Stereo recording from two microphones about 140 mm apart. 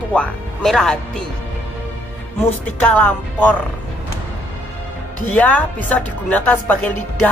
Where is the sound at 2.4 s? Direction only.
10° left (ahead or behind).